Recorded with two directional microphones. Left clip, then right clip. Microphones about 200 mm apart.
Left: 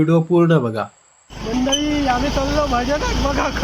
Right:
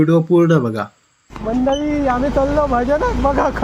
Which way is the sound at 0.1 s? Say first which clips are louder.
Right 2 dB; 5° right (ahead or behind).